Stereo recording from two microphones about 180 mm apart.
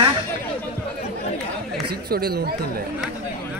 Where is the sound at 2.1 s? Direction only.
60° right (ahead or behind).